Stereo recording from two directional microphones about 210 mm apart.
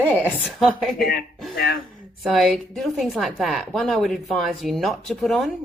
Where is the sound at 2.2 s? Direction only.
Centre (ahead or behind).